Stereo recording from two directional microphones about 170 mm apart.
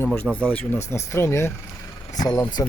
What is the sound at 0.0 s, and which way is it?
Speech, 10° left (ahead or behind).